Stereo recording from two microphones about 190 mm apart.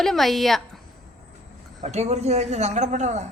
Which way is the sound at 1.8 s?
35° right (ahead or behind).